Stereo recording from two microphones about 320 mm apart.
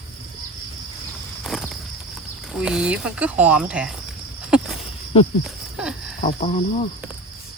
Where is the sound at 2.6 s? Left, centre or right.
Centre.